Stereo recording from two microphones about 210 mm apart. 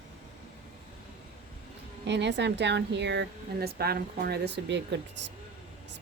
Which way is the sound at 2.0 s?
55° right (ahead or behind).